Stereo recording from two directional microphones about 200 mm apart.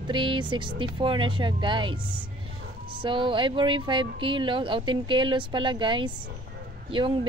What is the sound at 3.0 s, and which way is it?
Speech, 25° right (ahead or behind).